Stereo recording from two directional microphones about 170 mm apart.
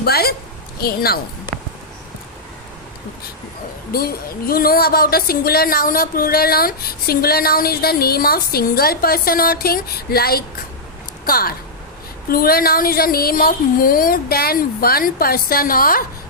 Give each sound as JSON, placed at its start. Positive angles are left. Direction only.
{"t": 0.0, "sound": "speech", "side_deg": 65}
{"t": 3.9, "sound": "speech", "side_deg": 65}